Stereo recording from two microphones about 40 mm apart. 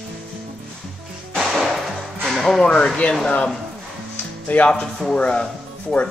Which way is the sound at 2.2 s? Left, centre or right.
Centre.